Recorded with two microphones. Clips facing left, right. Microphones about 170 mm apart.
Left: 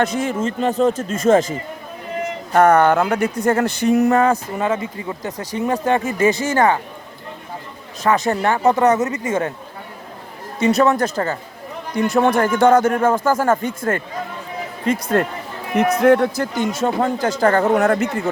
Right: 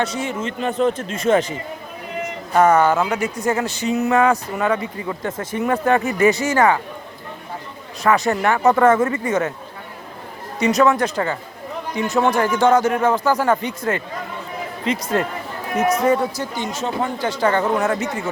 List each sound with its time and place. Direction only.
0.2 s speech: 40° left (ahead or behind)
2.5 s speech: 55° left (ahead or behind)
4.1 s speech: 35° left (ahead or behind)
8.3 s speech: 30° left (ahead or behind)
8.8 s speech: 20° left (ahead or behind)
10.8 s speech: 40° left (ahead or behind)
11.9 s speech: 55° left (ahead or behind)
16.6 s speech: 50° left (ahead or behind)
17.7 s speech: 60° left (ahead or behind)